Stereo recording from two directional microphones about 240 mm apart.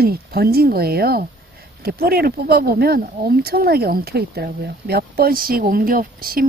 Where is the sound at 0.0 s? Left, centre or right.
Right.